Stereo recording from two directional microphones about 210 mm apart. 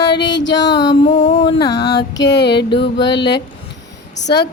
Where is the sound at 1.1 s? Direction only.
35° left (ahead or behind).